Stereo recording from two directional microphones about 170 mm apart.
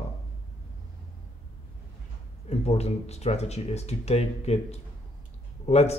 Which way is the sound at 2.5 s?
40° left (ahead or behind).